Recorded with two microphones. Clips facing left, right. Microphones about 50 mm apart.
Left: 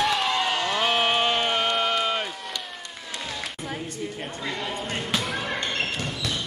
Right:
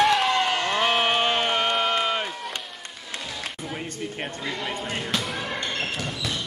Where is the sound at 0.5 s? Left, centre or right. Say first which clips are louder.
Right 1 dB; right.